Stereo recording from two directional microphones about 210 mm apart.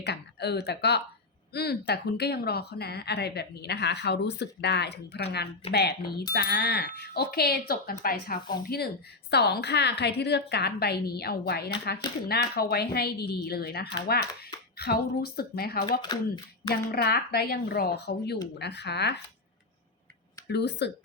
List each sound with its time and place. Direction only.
0.0 s a woman's voice: 50° left (ahead or behind)
16.0 s speech: 20° left (ahead or behind)
16.9 s a woman's voice: 50° left (ahead or behind)
20.5 s a woman's voice: 55° left (ahead or behind)